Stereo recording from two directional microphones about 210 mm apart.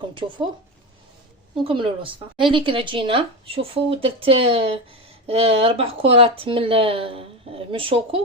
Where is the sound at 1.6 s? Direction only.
25° right (ahead or behind).